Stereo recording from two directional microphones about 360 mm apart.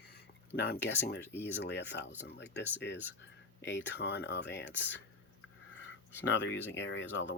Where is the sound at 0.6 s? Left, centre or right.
Left.